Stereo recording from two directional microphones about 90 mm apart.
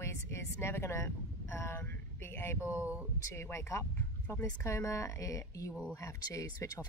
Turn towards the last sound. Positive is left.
turn(degrees=40)  # may be behind; listen again after turning